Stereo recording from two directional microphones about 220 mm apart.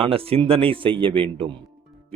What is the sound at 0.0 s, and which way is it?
A man's voice, 25° right (ahead or behind).